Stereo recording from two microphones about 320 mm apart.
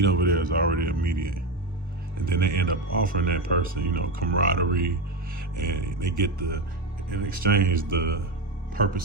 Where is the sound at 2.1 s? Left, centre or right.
Right.